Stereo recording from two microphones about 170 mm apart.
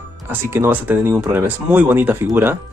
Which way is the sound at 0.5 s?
10° right (ahead or behind).